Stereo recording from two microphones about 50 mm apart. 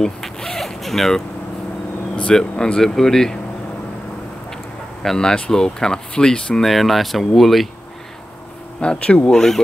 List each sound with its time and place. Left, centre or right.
0.0 s vehicle: centre
2.1 s speech: centre
5.0 s speech: centre
6.6 s speech: centre
8.8 s speech: left
9.3 s speech: centre